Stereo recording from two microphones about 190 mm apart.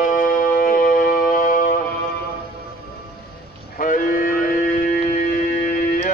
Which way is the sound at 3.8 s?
50° left (ahead or behind).